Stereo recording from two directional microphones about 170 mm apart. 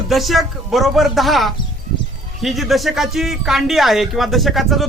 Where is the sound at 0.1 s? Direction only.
Centre (ahead or behind).